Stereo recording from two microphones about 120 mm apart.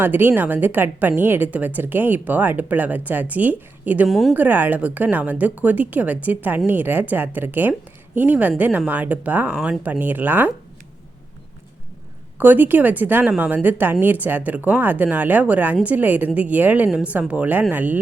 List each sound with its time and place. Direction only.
0.0 s a woman's voice: 15° right (ahead or behind)
4.1 s speech: centre (ahead or behind)
4.4 s a woman's voice: 15° right (ahead or behind)
12.4 s a woman's voice: 15° right (ahead or behind)